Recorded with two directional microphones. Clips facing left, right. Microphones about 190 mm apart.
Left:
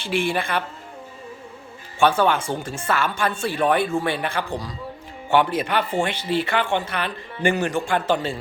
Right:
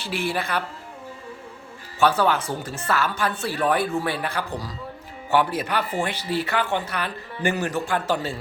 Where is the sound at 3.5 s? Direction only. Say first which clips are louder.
Left 2 dB; 25° left (ahead or behind).